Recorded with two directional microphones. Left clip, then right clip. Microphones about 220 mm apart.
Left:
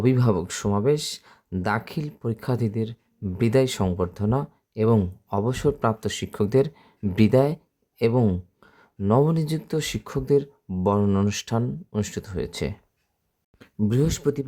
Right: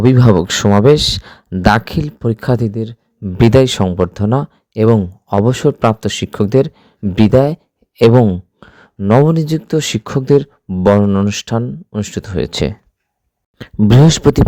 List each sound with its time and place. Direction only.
0.0 s speech: 30° right (ahead or behind)